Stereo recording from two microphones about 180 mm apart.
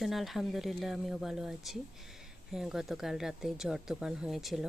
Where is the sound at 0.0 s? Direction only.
Centre (ahead or behind).